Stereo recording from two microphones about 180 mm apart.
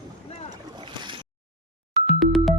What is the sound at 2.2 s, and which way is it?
Music, centre (ahead or behind).